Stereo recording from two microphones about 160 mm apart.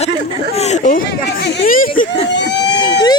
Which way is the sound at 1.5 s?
60° left (ahead or behind).